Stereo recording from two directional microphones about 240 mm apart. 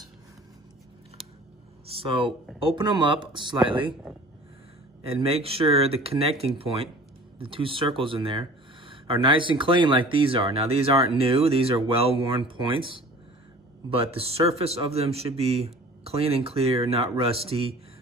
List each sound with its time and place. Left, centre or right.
1.9 s speech: right
5.0 s speech: right